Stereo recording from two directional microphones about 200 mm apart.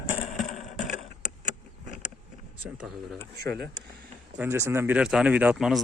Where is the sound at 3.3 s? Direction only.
55° right (ahead or behind).